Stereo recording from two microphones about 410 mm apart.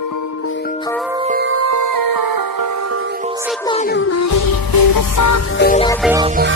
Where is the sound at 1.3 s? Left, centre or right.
Right.